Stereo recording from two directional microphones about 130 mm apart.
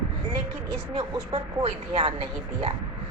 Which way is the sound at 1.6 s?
50° right (ahead or behind).